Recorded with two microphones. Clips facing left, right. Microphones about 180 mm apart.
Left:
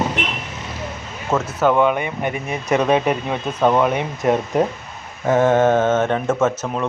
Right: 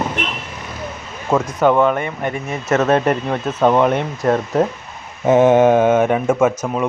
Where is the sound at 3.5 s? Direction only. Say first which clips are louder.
Right 2 dB; 10° right (ahead or behind).